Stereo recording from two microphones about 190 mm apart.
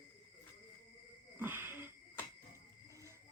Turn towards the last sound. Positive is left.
turn(degrees=-15)  # may be behind; listen again after turning